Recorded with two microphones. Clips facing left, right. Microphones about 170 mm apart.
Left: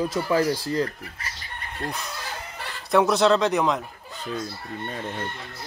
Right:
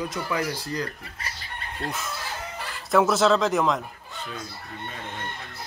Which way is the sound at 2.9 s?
Centre (ahead or behind).